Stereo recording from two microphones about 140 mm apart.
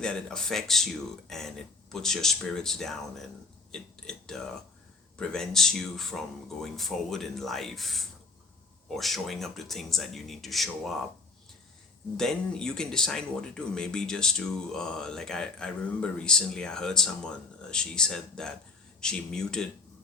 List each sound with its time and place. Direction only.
0.0 s speech: 5° left (ahead or behind)
12.1 s speech: 5° left (ahead or behind)